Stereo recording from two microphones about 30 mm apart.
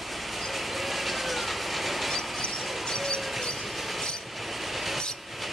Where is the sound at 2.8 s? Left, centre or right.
Centre.